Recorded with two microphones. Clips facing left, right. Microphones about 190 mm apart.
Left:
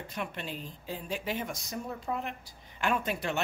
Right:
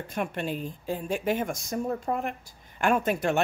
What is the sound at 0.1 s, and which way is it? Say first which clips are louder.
Speech: right 8 dB; 50° right (ahead or behind).